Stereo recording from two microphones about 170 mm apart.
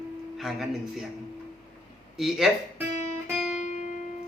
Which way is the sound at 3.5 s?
45° left (ahead or behind).